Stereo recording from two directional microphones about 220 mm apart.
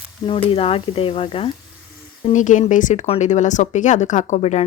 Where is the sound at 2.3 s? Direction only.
35° left (ahead or behind).